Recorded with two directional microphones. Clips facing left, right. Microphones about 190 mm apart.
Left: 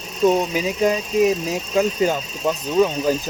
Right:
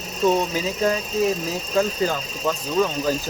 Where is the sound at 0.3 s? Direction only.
15° left (ahead or behind).